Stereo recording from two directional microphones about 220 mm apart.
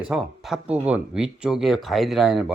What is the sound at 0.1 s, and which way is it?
Speech, 5° right (ahead or behind).